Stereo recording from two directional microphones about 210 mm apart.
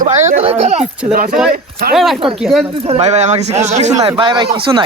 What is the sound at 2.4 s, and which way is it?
Speech, centre (ahead or behind).